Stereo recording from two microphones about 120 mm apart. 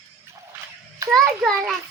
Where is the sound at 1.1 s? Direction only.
Centre (ahead or behind).